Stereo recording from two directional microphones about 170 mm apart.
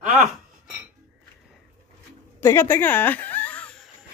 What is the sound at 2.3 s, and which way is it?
Chuckle, 15° left (ahead or behind).